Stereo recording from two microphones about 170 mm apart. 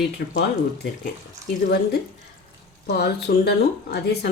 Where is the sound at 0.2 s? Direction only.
65° left (ahead or behind).